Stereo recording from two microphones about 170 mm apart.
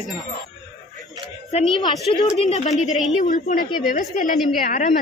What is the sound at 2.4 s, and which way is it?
A woman's voice, 40° left (ahead or behind).